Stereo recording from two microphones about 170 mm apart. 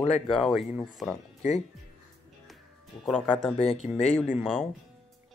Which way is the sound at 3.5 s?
35° left (ahead or behind).